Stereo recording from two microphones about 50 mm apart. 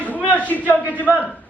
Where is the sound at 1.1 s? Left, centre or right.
Right.